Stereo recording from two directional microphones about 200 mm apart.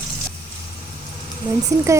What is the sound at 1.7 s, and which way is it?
Speech, 15° right (ahead or behind).